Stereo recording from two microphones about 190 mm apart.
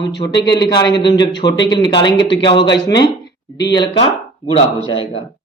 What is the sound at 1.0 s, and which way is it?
A man's voice, 25° left (ahead or behind).